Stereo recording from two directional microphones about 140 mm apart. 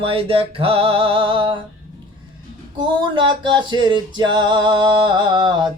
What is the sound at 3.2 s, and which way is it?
Male singing, 35° right (ahead or behind).